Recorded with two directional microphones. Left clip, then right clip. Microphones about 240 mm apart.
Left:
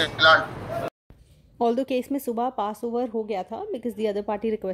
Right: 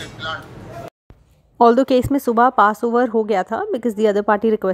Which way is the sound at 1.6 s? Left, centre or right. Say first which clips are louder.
Right 11 dB; right.